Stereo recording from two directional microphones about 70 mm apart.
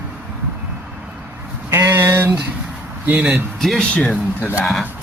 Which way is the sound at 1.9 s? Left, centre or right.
Right.